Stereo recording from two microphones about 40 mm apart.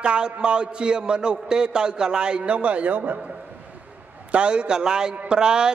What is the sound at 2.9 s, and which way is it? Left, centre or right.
Speech, right.